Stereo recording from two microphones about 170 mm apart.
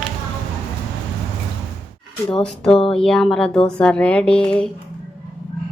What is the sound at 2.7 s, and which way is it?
Speech, 35° left (ahead or behind).